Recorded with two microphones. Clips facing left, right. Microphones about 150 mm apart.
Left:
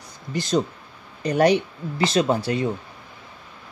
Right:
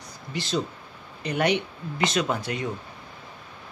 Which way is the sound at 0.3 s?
45° left (ahead or behind).